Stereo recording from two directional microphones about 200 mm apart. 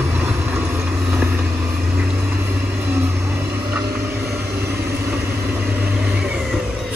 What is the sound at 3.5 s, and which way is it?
Vehicle, 10° right (ahead or behind).